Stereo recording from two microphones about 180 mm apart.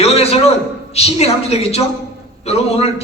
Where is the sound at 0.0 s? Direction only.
35° left (ahead or behind).